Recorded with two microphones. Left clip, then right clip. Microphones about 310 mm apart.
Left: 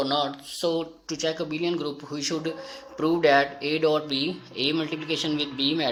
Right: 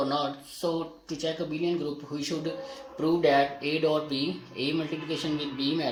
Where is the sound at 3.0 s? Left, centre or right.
Centre.